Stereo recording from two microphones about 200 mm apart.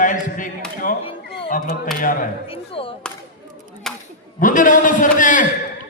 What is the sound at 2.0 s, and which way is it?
Speech, 45° left (ahead or behind).